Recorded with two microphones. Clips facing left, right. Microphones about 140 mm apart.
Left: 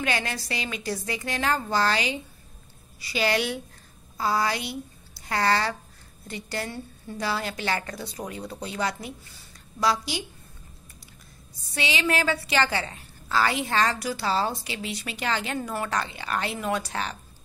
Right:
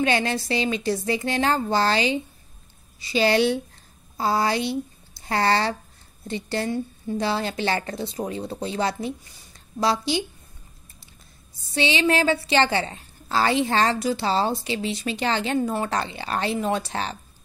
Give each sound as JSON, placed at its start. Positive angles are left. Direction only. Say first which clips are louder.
{"t": 0.0, "sound": "a woman's voice", "louder": "right 6 dB", "side_deg": -30}
{"t": 11.7, "sound": "a woman's voice", "louder": "right 5 dB", "side_deg": -30}